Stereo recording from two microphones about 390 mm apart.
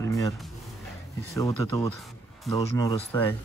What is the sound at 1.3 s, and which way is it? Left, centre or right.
Speech, centre.